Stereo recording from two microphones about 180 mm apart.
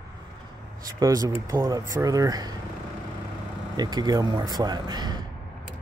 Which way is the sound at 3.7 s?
20° right (ahead or behind).